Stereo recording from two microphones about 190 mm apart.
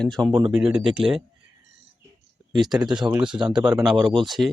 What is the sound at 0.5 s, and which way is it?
Speech, 5° right (ahead or behind).